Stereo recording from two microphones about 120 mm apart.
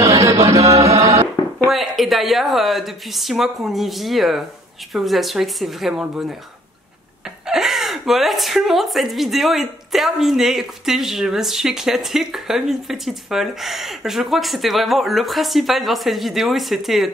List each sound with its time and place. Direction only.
0.0 s chant: 25° right (ahead or behind)
1.7 s a woman's voice: centre (ahead or behind)
7.4 s a woman's voice: 5° right (ahead or behind)